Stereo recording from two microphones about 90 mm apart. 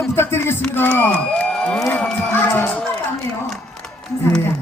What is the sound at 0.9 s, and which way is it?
Speech, 20° left (ahead or behind).